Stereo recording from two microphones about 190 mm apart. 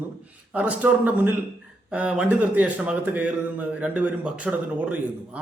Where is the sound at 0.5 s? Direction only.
10° right (ahead or behind).